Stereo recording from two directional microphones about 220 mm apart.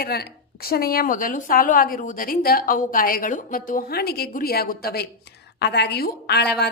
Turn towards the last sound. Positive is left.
turn(degrees=50)  # may be behind; listen again after turning